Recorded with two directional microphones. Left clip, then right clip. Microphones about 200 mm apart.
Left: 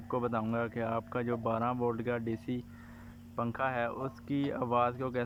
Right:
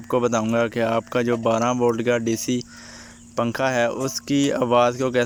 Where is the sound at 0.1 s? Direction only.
20° right (ahead or behind).